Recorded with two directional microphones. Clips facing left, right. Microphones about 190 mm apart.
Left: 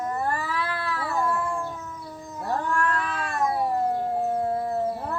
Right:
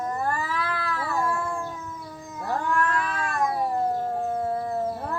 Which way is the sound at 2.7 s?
35° left (ahead or behind).